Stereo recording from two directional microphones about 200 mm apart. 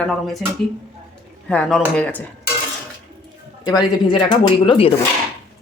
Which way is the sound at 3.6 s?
20° left (ahead or behind).